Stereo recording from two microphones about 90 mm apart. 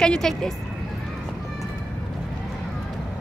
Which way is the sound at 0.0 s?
5° left (ahead or behind).